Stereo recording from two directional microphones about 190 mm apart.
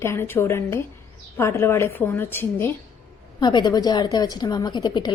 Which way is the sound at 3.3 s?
20° left (ahead or behind).